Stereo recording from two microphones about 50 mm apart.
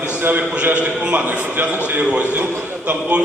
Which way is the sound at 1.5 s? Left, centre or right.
Right.